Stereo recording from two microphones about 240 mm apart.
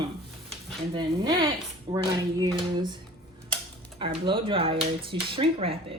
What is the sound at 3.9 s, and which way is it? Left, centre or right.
Speech, right.